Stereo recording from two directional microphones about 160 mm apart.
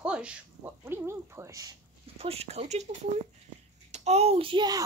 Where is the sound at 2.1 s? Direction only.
40° right (ahead or behind).